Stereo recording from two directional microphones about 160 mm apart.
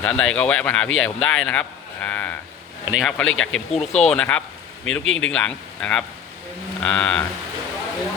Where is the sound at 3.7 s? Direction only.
40° left (ahead or behind).